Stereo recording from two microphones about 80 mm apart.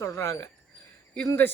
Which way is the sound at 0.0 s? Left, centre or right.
Left.